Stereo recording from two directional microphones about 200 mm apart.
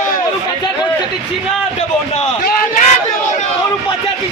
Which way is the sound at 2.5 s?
45° left (ahead or behind).